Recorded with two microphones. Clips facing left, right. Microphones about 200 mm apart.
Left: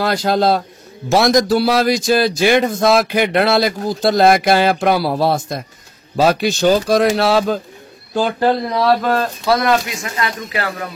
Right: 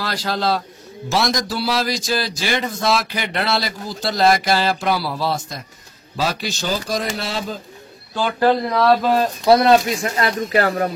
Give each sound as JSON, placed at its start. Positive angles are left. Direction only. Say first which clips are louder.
{"t": 0.0, "sound": "a man's voice", "louder": "left 7 dB", "side_deg": 50}
{"t": 8.1, "sound": "speech", "louder": "left 5 dB", "side_deg": 40}
{"t": 8.8, "sound": "speech", "louder": "even", "side_deg": -5}
{"t": 9.5, "sound": "speech", "louder": "right 3 dB", "side_deg": -30}